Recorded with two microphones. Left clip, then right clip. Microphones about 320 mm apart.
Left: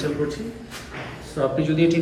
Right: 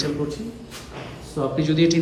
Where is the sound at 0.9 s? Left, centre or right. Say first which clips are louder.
Left 1 dB; centre.